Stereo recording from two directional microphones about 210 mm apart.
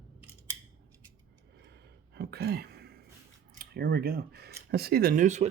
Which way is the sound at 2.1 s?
50° right (ahead or behind).